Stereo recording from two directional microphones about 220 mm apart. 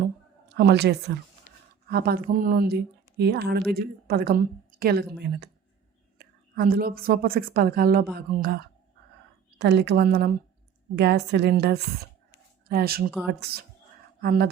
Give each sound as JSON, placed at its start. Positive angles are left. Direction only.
{"t": 0.0, "sound": "a sound", "side_deg": -50}
{"t": 1.9, "sound": "speech", "side_deg": -45}
{"t": 6.1, "sound": "a woman's voice", "side_deg": -45}